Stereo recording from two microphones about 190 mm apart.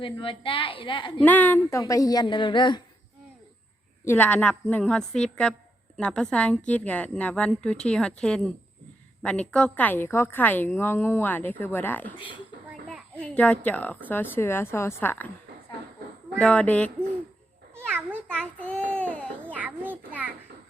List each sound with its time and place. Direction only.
0.0 s a woman's voice: 25° left (ahead or behind)
1.2 s a woman's voice: 10° left (ahead or behind)
4.0 s a woman's voice: 10° left (ahead or behind)
12.6 s a sound: centre (ahead or behind)
14.3 s a woman's voice: 10° left (ahead or behind)
16.4 s a woman's voice: 5° left (ahead or behind)
17.7 s a sound: 10° right (ahead or behind)
18.3 s child singing: 5° left (ahead or behind)
19.5 s a child's voice: 10° right (ahead or behind)